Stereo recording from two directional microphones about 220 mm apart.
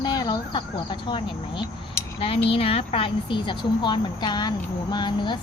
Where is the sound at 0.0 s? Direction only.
20° left (ahead or behind).